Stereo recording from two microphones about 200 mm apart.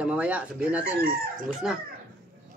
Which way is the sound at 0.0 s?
5° right (ahead or behind).